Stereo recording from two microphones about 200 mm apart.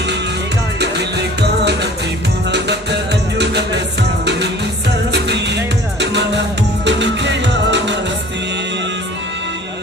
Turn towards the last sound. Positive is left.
turn(degrees=-60)  # may be behind; listen again after turning